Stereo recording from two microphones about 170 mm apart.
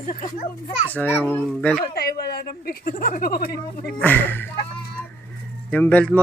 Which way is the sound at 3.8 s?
10° left (ahead or behind).